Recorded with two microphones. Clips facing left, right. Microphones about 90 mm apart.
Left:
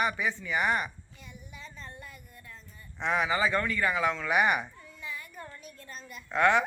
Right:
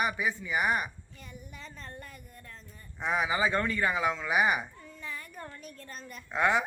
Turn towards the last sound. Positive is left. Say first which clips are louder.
# left 3 dB
turn(degrees=-10)  # may be behind; listen again after turning